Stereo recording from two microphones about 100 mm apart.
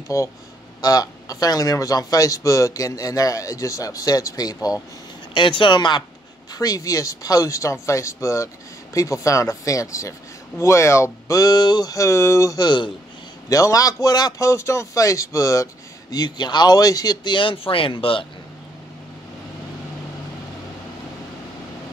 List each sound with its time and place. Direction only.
0.1 s speech: 35° left (ahead or behind)
5.3 s speech: 55° left (ahead or behind)
6.5 s speech: 40° left (ahead or behind)
13.5 s speech: 35° left (ahead or behind)
14.4 s speech: 30° left (ahead or behind); by 18.2 s 60° left (ahead or behind)